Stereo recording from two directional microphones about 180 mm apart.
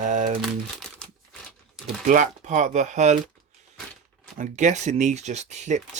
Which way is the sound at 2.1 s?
45° right (ahead or behind).